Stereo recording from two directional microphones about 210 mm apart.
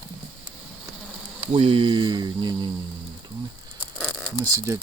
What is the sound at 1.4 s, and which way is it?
Speech, 25° right (ahead or behind).